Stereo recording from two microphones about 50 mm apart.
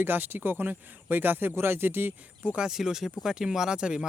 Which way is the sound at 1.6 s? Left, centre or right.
Right.